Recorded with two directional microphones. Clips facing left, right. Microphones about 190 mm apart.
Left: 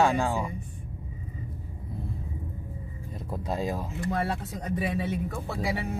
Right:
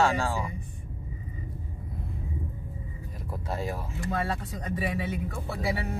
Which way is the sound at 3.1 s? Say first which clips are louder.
Left 3 dB; 20° left (ahead or behind).